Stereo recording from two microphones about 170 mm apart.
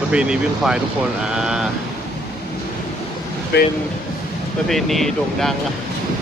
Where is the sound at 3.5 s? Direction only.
75° left (ahead or behind).